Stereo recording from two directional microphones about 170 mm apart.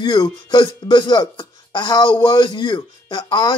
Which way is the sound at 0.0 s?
25° left (ahead or behind).